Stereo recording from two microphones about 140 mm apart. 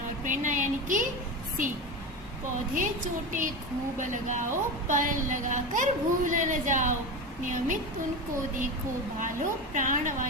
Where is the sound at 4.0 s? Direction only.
65° right (ahead or behind).